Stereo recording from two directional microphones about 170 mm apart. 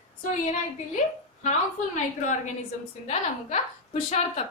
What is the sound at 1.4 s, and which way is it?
Music, 45° left (ahead or behind).